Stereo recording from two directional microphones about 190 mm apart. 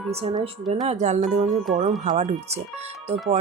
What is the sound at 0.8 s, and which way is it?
Speech, 35° right (ahead or behind).